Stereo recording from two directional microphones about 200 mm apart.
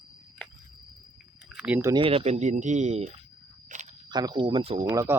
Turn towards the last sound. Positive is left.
turn(degrees=-15)  # may be behind; listen again after turning